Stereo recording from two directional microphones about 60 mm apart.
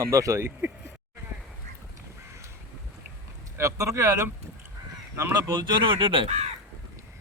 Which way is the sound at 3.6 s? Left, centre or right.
Right.